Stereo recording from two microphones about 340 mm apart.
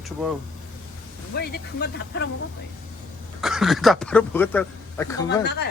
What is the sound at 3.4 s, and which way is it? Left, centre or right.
Speech, centre.